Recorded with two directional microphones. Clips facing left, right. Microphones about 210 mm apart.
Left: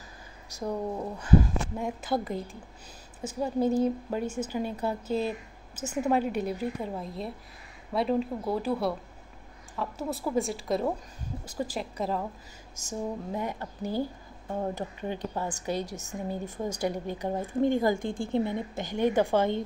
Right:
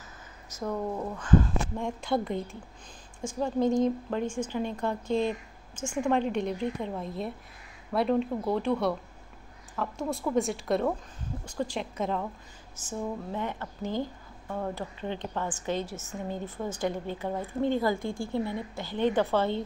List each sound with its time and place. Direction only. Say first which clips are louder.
0.5 s a woman's voice: even; 15° left (ahead or behind)
13.3 s a woman's voice: left 1 dB; 10° left (ahead or behind)